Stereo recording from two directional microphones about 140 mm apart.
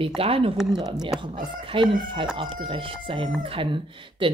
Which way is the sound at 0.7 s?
30° right (ahead or behind).